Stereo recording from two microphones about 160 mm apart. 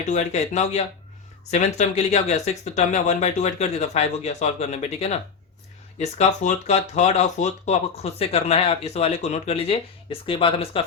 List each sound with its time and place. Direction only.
0.0 s speech: 45° left (ahead or behind)